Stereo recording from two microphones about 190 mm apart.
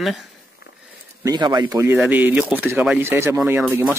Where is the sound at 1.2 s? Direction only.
20° right (ahead or behind).